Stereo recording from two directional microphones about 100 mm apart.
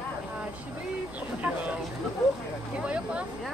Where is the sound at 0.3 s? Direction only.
15° right (ahead or behind).